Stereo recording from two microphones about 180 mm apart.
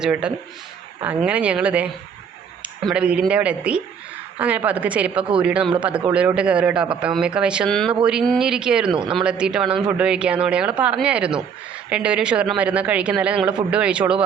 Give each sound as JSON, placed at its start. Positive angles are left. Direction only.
{"t": 0.0, "sound": "speech", "side_deg": -5}
{"t": 8.9, "sound": "speech", "side_deg": -25}
{"t": 9.1, "sound": "speech", "side_deg": -5}